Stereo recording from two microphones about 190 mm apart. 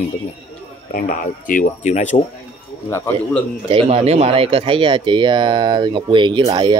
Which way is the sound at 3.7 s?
30° right (ahead or behind).